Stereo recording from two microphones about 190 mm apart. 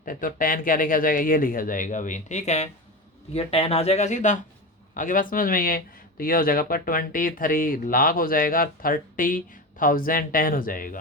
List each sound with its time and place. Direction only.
0.0 s speech: 45° left (ahead or behind)